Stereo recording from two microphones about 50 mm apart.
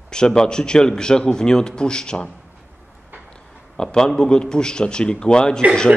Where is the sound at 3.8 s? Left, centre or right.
Centre.